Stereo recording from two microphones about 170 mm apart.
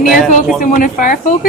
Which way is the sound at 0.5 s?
55° left (ahead or behind).